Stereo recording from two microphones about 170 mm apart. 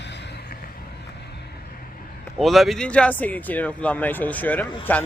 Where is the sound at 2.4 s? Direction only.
Centre (ahead or behind).